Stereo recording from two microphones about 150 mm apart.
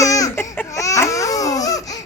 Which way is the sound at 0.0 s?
20° left (ahead or behind).